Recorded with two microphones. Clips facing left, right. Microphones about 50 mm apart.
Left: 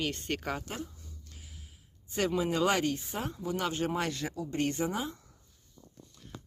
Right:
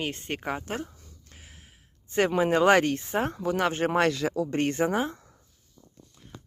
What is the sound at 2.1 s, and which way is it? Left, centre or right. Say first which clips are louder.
Speech: right 7 dB; right.